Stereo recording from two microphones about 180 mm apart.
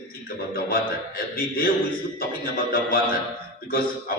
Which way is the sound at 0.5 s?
55° left (ahead or behind).